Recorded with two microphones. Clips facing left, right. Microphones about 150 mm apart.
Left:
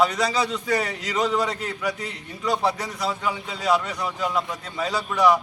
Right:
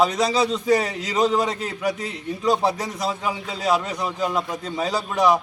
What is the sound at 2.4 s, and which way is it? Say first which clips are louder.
A man's voice: right 3 dB; 35° right (ahead or behind).